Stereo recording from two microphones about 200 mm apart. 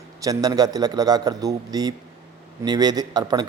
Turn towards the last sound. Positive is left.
turn(degrees=-20)  # may be behind; listen again after turning